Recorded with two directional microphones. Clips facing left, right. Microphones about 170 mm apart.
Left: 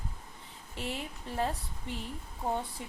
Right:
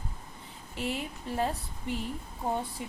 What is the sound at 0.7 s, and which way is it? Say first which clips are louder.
A woman's voice: right 4 dB; 10° right (ahead or behind).